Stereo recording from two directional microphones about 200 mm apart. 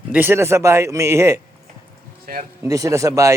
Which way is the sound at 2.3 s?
45° right (ahead or behind).